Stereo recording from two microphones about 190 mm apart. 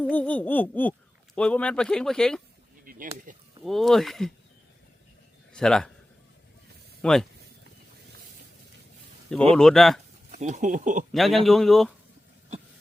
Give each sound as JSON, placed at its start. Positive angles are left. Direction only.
{"t": 0.0, "sound": "laughter", "side_deg": 10}
{"t": 1.4, "sound": "speech", "side_deg": 5}
{"t": 2.8, "sound": "a sound", "side_deg": -45}
{"t": 3.6, "sound": "speech", "side_deg": 0}
{"t": 5.5, "sound": "speech", "side_deg": 5}
{"t": 7.0, "sound": "speech", "side_deg": 5}
{"t": 9.3, "sound": "speech", "side_deg": 5}
{"t": 10.3, "sound": "speech", "side_deg": -40}
{"t": 11.1, "sound": "speech", "side_deg": 0}